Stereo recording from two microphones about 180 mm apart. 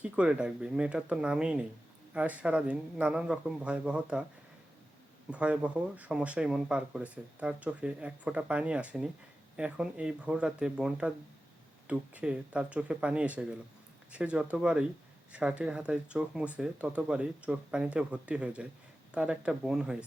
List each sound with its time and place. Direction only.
0.0 s speech: 5° right (ahead or behind)
5.3 s speech: 5° right (ahead or behind)